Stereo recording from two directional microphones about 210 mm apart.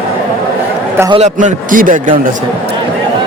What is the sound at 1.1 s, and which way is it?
A man's voice, 35° right (ahead or behind).